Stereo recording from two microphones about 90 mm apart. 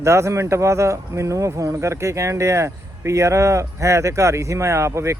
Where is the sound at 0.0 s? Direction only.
30° right (ahead or behind).